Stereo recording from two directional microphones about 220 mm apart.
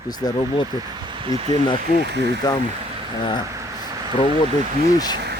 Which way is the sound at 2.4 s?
20° left (ahead or behind).